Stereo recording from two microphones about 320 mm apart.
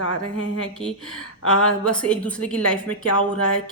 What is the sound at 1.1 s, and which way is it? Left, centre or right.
Speech, left.